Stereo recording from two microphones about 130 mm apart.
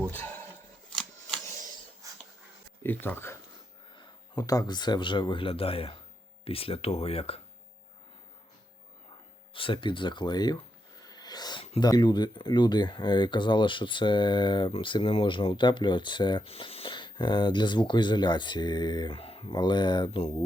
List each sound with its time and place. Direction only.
0.1 s speech: 15° left (ahead or behind)
2.8 s speech: 15° left (ahead or behind)
3.9 s speech: 30° left (ahead or behind); by 7.4 s 50° left (ahead or behind)
9.5 s speech: 40° left (ahead or behind)
11.0 s wheeze: 30° left (ahead or behind)
11.8 s speech: 35° left (ahead or behind)
19.1 s speech: 45° left (ahead or behind)